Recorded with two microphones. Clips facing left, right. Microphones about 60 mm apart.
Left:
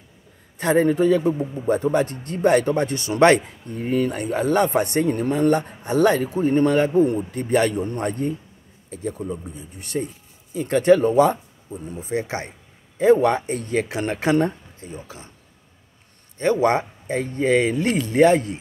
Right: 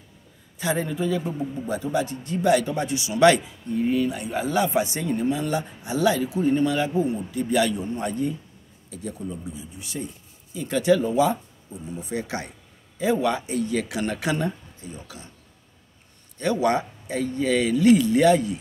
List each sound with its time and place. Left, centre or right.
0.6 s a man's voice: left
9.5 s a man's voice: left
12.0 s a man's voice: left
13.0 s a man's voice: left
16.3 s a man's voice: left